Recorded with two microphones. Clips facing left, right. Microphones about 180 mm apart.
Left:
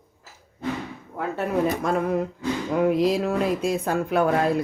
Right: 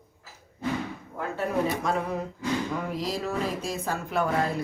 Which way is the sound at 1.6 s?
50° left (ahead or behind).